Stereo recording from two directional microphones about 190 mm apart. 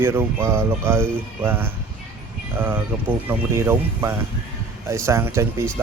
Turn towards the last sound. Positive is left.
turn(degrees=-15)  # may be behind; listen again after turning